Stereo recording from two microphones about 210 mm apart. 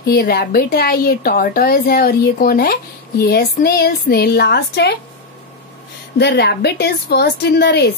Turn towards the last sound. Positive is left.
turn(degrees=50)  # may be behind; listen again after turning